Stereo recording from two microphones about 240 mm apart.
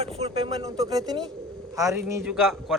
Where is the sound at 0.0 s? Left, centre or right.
Right.